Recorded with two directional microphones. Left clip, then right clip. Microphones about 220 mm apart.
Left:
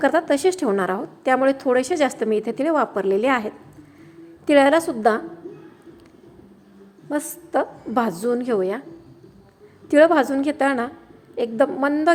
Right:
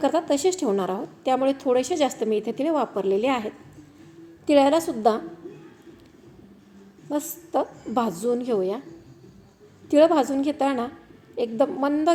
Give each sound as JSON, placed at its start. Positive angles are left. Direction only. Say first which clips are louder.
{"t": 0.0, "sound": "a woman's voice", "louder": "left 4 dB", "side_deg": 5}
{"t": 7.1, "sound": "a woman's voice", "louder": "left 3 dB", "side_deg": 5}
{"t": 9.9, "sound": "a woman's voice", "louder": "left 3 dB", "side_deg": 5}